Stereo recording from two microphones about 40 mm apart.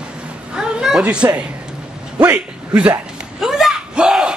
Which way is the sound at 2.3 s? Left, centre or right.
Right.